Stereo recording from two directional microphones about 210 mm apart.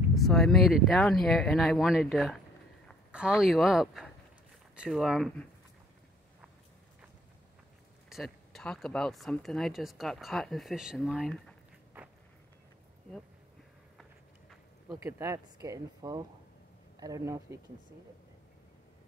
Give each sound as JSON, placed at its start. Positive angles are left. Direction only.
{"t": 0.1, "sound": "speech", "side_deg": 0}
{"t": 8.1, "sound": "speech", "side_deg": 0}
{"t": 15.0, "sound": "speech", "side_deg": -10}